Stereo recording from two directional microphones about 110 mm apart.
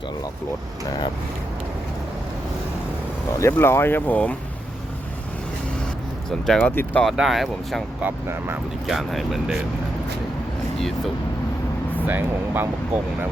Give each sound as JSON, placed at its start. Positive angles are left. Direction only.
{"t": 3.3, "sound": "speech", "side_deg": 25}
{"t": 6.4, "sound": "speech", "side_deg": 5}
{"t": 6.7, "sound": "speech", "side_deg": 15}
{"t": 7.0, "sound": "speech", "side_deg": 0}
{"t": 8.0, "sound": "speech", "side_deg": -20}
{"t": 8.9, "sound": "speech", "side_deg": 0}
{"t": 10.8, "sound": "speech", "side_deg": 5}
{"t": 12.0, "sound": "speech", "side_deg": -20}